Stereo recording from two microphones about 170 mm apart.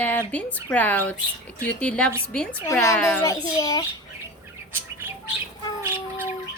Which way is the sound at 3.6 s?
20° left (ahead or behind).